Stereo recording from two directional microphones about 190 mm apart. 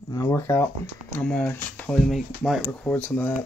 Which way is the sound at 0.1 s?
15° left (ahead or behind).